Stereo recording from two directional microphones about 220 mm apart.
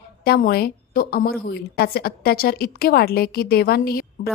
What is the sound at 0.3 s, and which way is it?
A woman's voice, 45° left (ahead or behind).